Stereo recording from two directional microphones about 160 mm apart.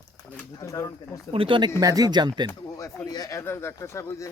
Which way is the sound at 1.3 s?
30° right (ahead or behind).